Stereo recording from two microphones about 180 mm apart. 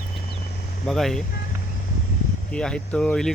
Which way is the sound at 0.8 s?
Centre (ahead or behind).